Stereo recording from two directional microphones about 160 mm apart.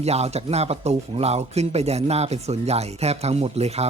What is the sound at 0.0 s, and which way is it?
Speech, 40° right (ahead or behind).